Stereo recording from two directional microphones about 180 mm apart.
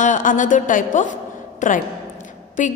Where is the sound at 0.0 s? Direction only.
45° left (ahead or behind).